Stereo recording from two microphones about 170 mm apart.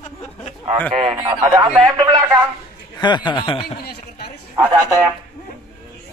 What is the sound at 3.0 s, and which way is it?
Speech, 25° left (ahead or behind).